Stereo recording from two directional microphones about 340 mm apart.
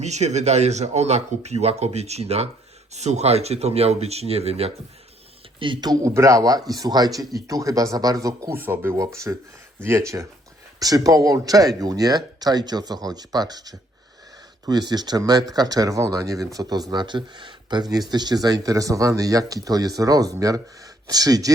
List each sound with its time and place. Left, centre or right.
0.0 s speech: centre